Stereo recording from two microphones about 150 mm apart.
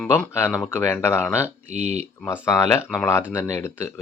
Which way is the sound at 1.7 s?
45° right (ahead or behind).